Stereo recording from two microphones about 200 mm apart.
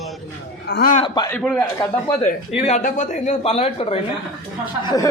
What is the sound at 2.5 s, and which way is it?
A man's voice, 35° left (ahead or behind).